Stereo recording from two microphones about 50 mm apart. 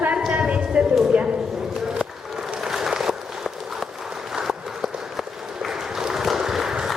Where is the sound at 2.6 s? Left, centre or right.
Centre.